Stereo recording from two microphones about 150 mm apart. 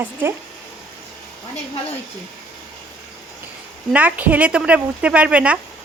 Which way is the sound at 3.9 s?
10° right (ahead or behind).